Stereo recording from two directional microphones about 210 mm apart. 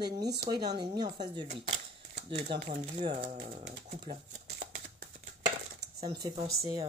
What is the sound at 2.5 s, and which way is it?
Speech, 25° right (ahead or behind).